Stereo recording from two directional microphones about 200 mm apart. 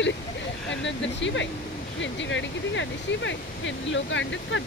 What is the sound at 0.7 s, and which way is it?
Speech, 65° left (ahead or behind).